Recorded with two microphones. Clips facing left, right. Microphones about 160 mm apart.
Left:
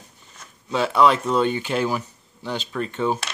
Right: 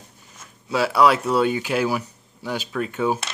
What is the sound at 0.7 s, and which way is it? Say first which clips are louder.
Speech: even; 5° right (ahead or behind).